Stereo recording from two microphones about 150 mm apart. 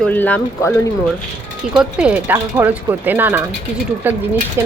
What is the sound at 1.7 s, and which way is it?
Speech, 5° right (ahead or behind).